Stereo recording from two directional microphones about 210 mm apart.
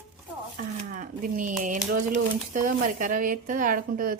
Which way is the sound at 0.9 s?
40° right (ahead or behind).